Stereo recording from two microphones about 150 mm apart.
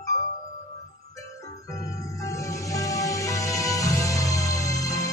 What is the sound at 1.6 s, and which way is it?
Organ, 25° left (ahead or behind).